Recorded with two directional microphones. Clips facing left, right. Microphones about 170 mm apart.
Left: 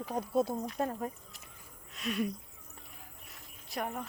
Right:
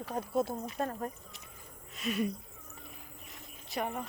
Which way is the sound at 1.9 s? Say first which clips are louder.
Right 1 dB; centre (ahead or behind).